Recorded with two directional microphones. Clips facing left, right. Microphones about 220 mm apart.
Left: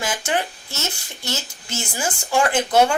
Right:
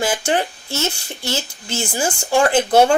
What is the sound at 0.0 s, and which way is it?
Speech, 30° right (ahead or behind).